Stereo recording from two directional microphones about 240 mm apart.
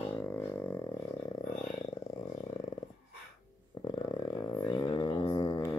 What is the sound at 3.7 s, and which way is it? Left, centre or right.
Didgeridoo, centre.